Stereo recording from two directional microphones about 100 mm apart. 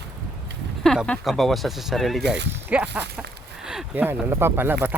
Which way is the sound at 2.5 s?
15° right (ahead or behind).